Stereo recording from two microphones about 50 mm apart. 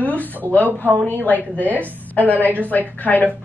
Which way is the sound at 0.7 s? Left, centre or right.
Right.